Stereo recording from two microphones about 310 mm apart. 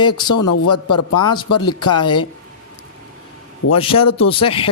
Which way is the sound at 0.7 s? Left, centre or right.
Left.